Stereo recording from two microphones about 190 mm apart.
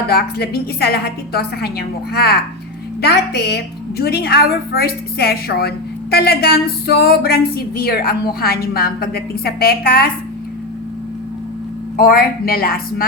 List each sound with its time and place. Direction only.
0.1 s a woman's voice: 55° left (ahead or behind)
11.9 s a woman's voice: 55° left (ahead or behind)